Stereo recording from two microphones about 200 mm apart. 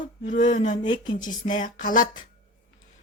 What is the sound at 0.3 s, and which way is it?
Speech, 40° left (ahead or behind).